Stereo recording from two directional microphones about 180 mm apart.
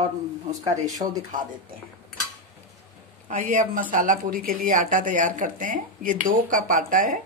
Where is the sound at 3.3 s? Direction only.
45° right (ahead or behind).